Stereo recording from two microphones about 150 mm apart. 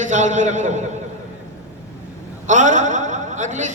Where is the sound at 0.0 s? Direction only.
55° right (ahead or behind).